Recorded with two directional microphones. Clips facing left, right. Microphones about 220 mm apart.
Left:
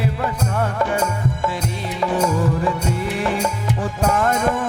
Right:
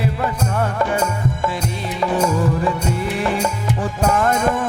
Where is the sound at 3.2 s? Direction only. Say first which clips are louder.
Right 1 dB; 15° right (ahead or behind).